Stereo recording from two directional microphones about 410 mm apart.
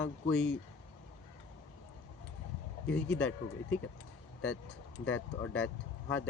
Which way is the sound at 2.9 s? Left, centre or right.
Centre.